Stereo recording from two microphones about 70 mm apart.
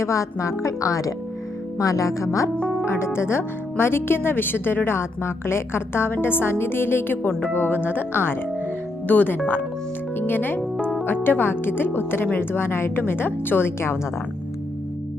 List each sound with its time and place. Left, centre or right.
0.0 s speech: left